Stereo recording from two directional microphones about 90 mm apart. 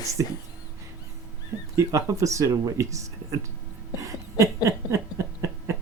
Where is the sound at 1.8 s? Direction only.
35° right (ahead or behind).